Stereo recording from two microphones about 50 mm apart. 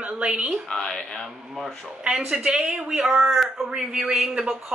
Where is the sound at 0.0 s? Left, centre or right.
Right.